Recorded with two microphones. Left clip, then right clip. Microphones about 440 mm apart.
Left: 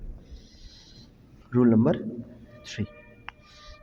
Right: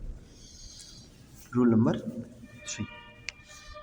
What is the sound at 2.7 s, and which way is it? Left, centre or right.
Speech, left.